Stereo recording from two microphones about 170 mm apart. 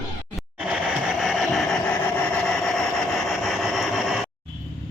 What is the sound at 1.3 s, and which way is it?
Vehicle, centre (ahead or behind).